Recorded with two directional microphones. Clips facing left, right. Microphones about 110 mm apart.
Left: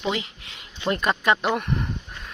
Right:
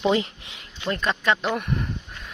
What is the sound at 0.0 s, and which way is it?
Speech, 30° right (ahead or behind).